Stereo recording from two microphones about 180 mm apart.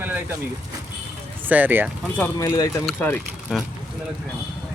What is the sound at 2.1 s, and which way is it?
Speech, 15° left (ahead or behind).